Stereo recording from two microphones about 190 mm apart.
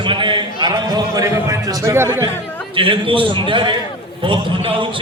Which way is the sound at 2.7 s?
25° right (ahead or behind).